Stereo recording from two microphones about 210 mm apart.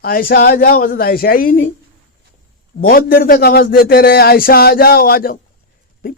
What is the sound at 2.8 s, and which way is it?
Speech, 45° left (ahead or behind).